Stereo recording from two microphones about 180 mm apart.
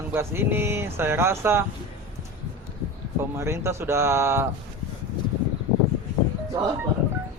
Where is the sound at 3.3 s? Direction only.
15° right (ahead or behind).